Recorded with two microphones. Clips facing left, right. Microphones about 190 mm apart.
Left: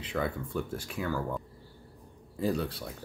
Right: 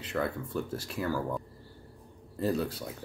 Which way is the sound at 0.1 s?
5° right (ahead or behind).